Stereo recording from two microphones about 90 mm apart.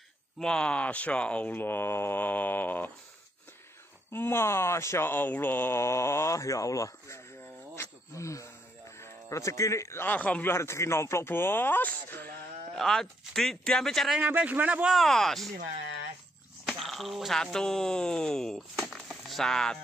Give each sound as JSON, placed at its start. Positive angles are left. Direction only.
{"t": 0.4, "sound": "speech", "side_deg": 10}
{"t": 4.1, "sound": "speech", "side_deg": 25}
{"t": 10.0, "sound": "speech", "side_deg": 20}
{"t": 10.5, "sound": "speech", "side_deg": 30}
{"t": 12.7, "sound": "speech", "side_deg": 5}
{"t": 14.1, "sound": "a man's voice", "side_deg": -15}
{"t": 15.0, "sound": "speech", "side_deg": 5}
{"t": 16.6, "sound": "speech", "side_deg": 0}
{"t": 18.8, "sound": "a sound", "side_deg": 0}